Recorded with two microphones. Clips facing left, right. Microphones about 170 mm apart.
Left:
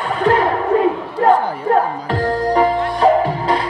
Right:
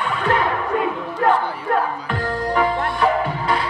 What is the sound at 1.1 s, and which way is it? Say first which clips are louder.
Music: left 3 dB; 35° left (ahead or behind).